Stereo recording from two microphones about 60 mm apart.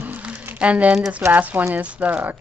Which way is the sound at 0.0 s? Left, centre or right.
Right.